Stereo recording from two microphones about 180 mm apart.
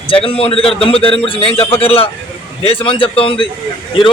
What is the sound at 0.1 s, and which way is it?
A man's voice, 30° left (ahead or behind).